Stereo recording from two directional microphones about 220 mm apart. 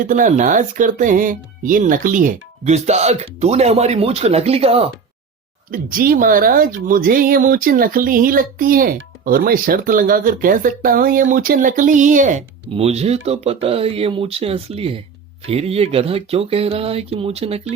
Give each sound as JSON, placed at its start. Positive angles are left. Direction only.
{"t": 0.0, "sound": "speech", "side_deg": -35}
{"t": 5.7, "sound": "speech", "side_deg": -40}